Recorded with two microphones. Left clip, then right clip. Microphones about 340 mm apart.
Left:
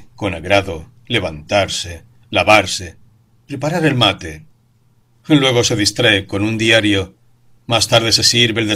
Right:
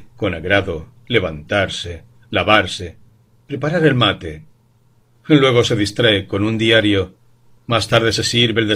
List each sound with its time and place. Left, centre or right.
0.2 s a man's voice: centre